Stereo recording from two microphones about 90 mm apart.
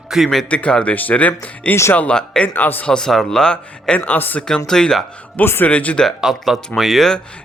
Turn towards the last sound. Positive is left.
turn(degrees=5)  # may be behind; listen again after turning